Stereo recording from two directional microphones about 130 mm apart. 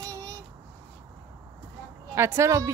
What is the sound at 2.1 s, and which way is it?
Speech, 20° right (ahead or behind).